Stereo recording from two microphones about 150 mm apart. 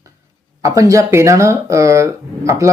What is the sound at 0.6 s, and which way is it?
Speech, 20° right (ahead or behind).